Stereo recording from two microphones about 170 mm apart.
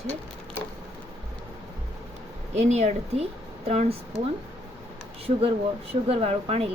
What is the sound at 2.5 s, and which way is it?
Speech, 40° right (ahead or behind).